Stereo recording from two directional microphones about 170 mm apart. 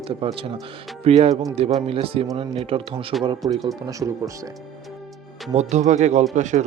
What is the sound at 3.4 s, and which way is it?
Speech, 20° right (ahead or behind).